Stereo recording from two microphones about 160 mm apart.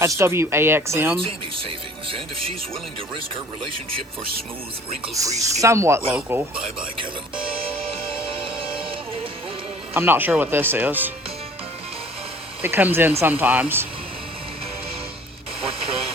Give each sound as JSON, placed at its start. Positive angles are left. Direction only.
{"t": 0.0, "sound": "speech", "side_deg": -15}
{"t": 1.1, "sound": "speech", "side_deg": -35}
{"t": 5.4, "sound": "speech", "side_deg": -20}
{"t": 8.5, "sound": "music", "side_deg": -35}
{"t": 9.9, "sound": "speech", "side_deg": -15}
{"t": 12.6, "sound": "speech", "side_deg": -15}
{"t": 15.6, "sound": "radio", "side_deg": -35}